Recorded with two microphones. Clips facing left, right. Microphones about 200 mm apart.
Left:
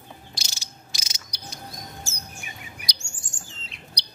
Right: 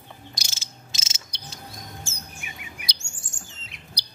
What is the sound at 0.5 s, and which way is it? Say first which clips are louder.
Insect: even; 25° right (ahead or behind).